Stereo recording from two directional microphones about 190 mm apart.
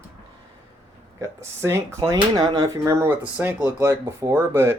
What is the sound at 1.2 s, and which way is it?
Speech, 15° right (ahead or behind).